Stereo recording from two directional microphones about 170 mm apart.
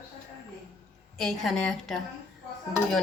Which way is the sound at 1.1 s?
Centre (ahead or behind).